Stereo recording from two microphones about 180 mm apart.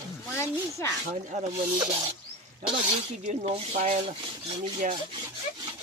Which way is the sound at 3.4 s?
40° right (ahead or behind).